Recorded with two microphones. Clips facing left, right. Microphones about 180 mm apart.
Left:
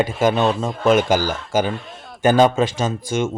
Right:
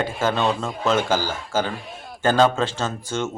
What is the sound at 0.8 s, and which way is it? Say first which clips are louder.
Speech: left 5 dB; 10° left (ahead or behind).